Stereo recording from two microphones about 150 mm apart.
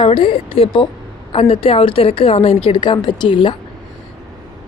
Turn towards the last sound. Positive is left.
turn(degrees=35)  # may be behind; listen again after turning